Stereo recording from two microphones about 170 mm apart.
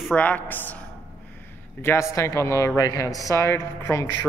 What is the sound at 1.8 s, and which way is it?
A man's voice, 15° left (ahead or behind).